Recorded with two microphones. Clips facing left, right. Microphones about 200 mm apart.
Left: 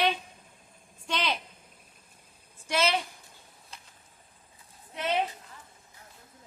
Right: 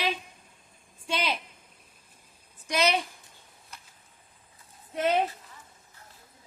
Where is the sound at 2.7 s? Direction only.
15° right (ahead or behind).